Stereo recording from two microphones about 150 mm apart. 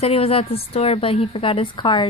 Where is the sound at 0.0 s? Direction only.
40° left (ahead or behind).